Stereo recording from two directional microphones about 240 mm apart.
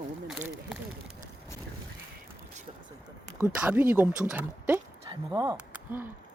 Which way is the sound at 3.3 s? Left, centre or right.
Centre.